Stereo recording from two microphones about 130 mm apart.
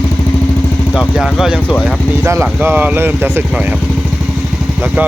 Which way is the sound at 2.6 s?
15° right (ahead or behind).